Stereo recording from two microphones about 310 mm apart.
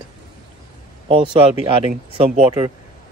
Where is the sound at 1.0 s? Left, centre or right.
Centre.